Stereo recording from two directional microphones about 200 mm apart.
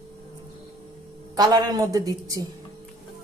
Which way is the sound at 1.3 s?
20° right (ahead or behind).